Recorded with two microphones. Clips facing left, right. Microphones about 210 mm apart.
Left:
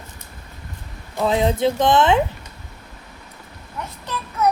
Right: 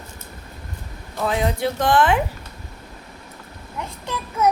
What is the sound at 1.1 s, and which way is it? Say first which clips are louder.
A woman's voice: left 3 dB; 25° left (ahead or behind).